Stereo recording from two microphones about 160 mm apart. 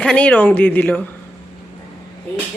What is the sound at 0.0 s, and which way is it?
A woman's voice, 5° left (ahead or behind).